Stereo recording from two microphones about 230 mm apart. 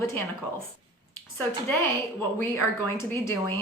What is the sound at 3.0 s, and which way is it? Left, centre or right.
Speech, centre.